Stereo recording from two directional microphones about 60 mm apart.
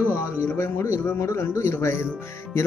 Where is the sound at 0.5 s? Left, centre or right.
Left.